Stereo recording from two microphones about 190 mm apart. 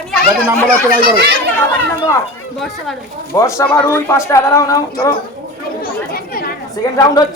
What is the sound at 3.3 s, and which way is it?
Speech, 15° left (ahead or behind).